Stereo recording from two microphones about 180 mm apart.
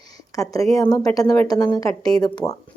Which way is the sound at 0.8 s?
20° left (ahead or behind).